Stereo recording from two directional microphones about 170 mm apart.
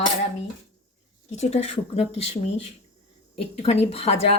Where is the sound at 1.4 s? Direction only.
40° left (ahead or behind).